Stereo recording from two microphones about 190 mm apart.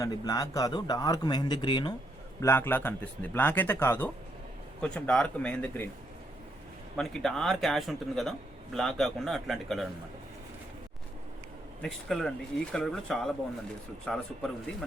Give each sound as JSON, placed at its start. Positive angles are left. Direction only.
{"t": 0.0, "sound": "speech", "side_deg": 20}
{"t": 2.4, "sound": "speech", "side_deg": 10}
{"t": 6.9, "sound": "speech", "side_deg": 5}
{"t": 11.8, "sound": "speech", "side_deg": 5}